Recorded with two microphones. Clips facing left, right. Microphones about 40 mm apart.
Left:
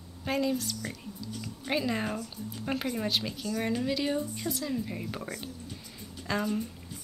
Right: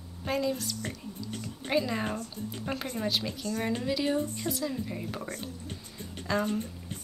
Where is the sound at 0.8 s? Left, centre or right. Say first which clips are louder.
Right 1 dB; right.